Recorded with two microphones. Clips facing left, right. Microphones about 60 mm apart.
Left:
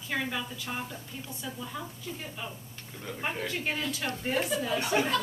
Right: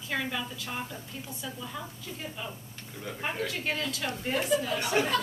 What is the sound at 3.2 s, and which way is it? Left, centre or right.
A woman's voice, centre.